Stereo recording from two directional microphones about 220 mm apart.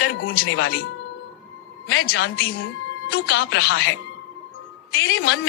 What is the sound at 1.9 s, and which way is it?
Speech, 55° left (ahead or behind).